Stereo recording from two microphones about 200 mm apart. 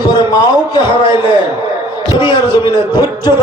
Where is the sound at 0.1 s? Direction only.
20° left (ahead or behind).